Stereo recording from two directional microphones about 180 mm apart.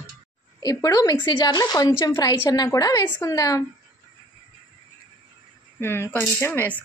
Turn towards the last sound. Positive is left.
turn(degrees=10)  # may be behind; listen again after turning